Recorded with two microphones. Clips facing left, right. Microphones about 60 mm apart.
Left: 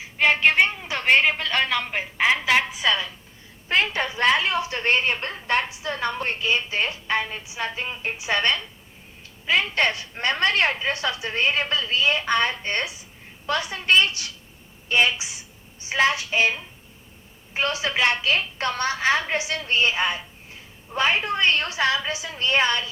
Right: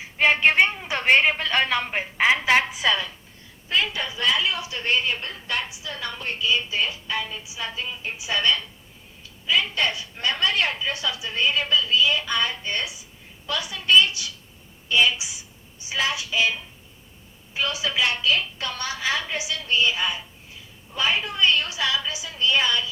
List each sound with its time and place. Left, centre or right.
0.2 s a woman's voice: centre
3.7 s a woman's voice: left